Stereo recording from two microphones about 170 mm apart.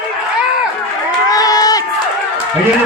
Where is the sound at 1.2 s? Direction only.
20° left (ahead or behind).